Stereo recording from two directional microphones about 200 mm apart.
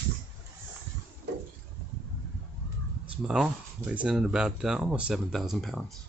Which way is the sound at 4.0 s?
5° right (ahead or behind).